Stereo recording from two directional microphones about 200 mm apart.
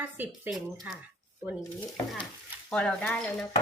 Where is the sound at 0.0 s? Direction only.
10° right (ahead or behind).